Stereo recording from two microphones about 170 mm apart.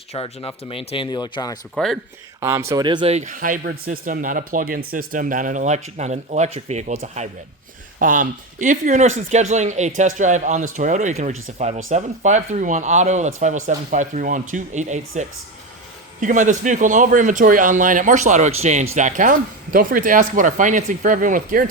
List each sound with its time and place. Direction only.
0.1 s speech: 35° left (ahead or behind)
1.7 s speech: centre (ahead or behind)
2.4 s speech: 15° right (ahead or behind)
3.1 s speech: 45° right (ahead or behind)